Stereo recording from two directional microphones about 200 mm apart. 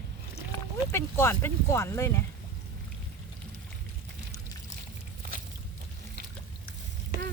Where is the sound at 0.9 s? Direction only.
10° left (ahead or behind).